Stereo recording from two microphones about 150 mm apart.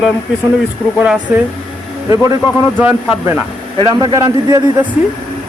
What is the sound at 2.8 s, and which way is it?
Speech, 10° right (ahead or behind).